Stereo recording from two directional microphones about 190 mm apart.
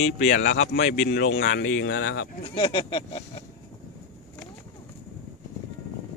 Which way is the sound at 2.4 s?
25° left (ahead or behind).